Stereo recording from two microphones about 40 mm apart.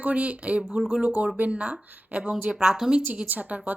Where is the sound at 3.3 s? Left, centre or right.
Right.